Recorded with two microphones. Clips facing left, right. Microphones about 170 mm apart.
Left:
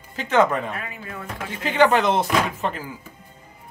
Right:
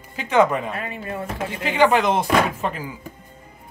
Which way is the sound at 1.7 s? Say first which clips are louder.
Even; 10° right (ahead or behind).